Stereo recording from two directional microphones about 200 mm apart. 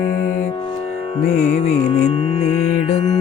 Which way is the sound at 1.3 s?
35° left (ahead or behind).